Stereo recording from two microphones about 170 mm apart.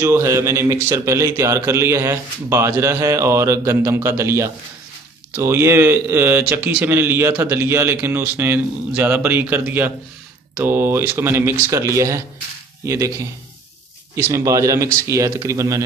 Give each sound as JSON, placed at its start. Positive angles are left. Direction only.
{"t": 0.0, "sound": "a man's voice", "side_deg": -15}